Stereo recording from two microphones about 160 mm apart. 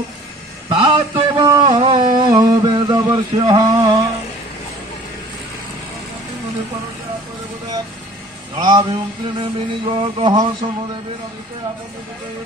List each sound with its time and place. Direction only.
0.7 s a sound: 30° right (ahead or behind)
8.5 s a man's voice: 30° right (ahead or behind)
9.4 s music: 35° right (ahead or behind)